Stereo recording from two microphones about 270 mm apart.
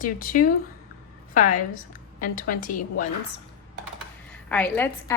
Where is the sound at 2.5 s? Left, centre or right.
Left.